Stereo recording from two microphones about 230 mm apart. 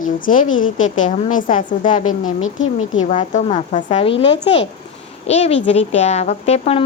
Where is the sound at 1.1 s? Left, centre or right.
Left.